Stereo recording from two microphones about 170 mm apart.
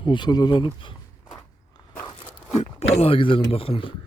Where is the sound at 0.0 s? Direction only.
25° left (ahead or behind).